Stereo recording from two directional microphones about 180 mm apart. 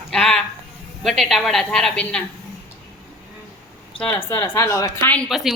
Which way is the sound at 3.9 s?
30° left (ahead or behind).